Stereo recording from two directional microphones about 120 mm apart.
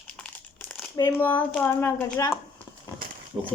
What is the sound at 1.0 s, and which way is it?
Speech, 15° left (ahead or behind).